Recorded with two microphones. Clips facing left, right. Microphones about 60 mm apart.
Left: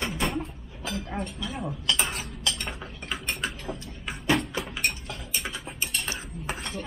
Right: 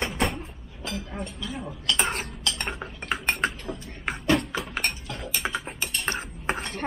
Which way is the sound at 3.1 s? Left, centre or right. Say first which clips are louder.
Right 6 dB; right.